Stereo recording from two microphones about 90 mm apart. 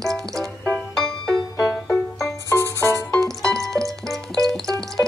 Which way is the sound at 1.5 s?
35° left (ahead or behind).